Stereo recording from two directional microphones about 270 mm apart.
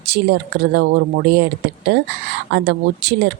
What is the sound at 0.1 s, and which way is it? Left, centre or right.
Speech, right.